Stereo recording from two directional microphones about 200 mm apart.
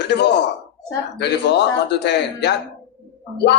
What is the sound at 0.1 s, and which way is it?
Speech, 60° left (ahead or behind).